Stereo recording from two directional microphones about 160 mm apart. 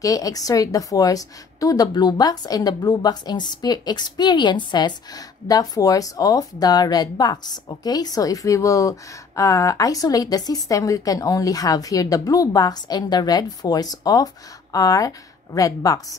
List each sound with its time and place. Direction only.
0.0 s a woman's voice: 20° left (ahead or behind)